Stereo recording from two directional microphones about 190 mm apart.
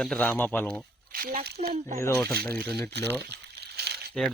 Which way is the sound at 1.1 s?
50° right (ahead or behind).